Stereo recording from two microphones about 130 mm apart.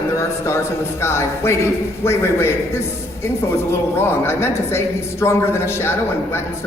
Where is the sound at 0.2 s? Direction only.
20° left (ahead or behind).